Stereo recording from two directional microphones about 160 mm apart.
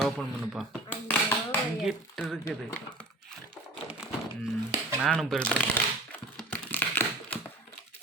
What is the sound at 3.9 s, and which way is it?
Cattle, 5° right (ahead or behind).